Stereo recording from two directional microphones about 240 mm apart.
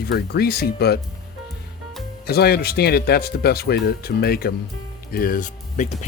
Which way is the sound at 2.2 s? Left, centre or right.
Left.